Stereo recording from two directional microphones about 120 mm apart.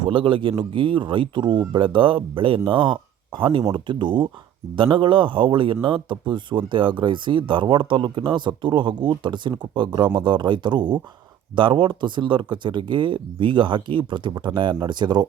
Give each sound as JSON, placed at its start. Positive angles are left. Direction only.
{"t": 0.0, "sound": "speech", "side_deg": -45}